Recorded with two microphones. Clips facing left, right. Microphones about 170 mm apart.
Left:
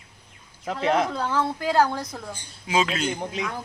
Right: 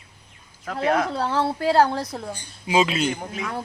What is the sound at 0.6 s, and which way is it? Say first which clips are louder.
Speech: right 1 dB; 20° left (ahead or behind).